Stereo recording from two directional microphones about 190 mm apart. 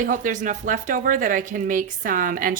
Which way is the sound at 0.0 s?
45° right (ahead or behind).